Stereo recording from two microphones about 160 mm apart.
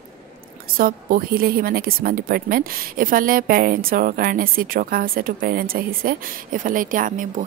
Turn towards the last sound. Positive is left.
turn(degrees=-55)  # may be behind; listen again after turning